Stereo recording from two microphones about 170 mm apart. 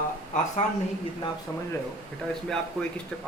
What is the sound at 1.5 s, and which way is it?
Speech, 15° left (ahead or behind).